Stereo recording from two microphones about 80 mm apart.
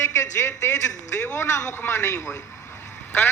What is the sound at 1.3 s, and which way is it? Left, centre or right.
A man's voice, left.